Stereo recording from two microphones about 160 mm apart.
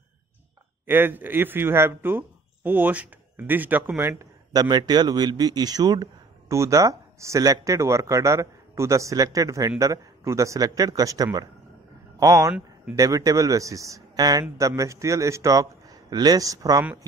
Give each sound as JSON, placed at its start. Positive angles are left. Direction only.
{"t": 0.8, "sound": "speech", "side_deg": -15}